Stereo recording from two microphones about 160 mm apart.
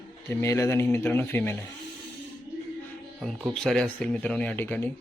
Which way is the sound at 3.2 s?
Centre (ahead or behind).